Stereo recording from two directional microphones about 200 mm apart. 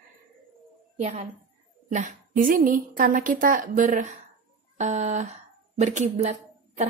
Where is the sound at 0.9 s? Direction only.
30° right (ahead or behind).